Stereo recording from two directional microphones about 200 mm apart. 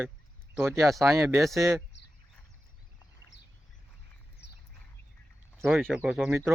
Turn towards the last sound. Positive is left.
turn(degrees=-5)  # may be behind; listen again after turning